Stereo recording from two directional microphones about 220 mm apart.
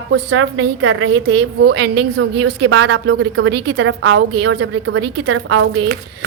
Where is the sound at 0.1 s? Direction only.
60° right (ahead or behind).